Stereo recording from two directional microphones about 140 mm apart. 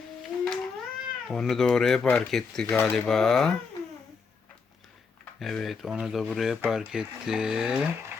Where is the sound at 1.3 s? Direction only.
5° left (ahead or behind).